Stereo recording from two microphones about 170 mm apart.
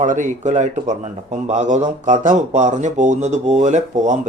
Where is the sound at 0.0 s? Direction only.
45° right (ahead or behind).